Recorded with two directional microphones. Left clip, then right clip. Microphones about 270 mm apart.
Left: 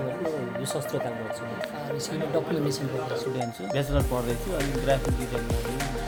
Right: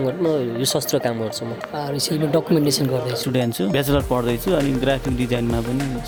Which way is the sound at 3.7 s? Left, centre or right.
Right.